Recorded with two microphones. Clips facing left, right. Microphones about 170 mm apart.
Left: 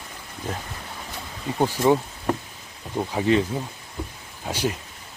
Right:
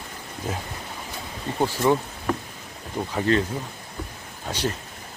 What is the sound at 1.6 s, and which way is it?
A man's voice, 15° left (ahead or behind).